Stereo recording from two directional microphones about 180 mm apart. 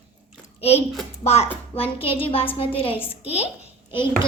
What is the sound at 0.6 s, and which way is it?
A child's voice, 35° left (ahead or behind).